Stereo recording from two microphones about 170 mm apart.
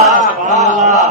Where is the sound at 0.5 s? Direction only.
45° right (ahead or behind).